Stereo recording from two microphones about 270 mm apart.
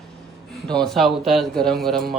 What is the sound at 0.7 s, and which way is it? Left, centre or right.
Speech, centre.